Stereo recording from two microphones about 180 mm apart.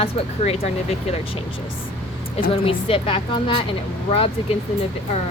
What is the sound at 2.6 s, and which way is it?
Speech, 30° left (ahead or behind).